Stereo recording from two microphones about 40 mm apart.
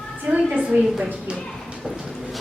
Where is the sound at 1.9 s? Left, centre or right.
Centre.